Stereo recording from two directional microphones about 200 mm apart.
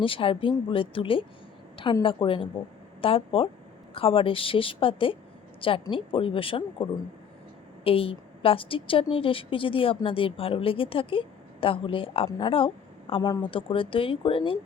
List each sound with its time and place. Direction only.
0.0 s a woman's voice: 25° left (ahead or behind)
7.9 s a woman's voice: 30° left (ahead or behind)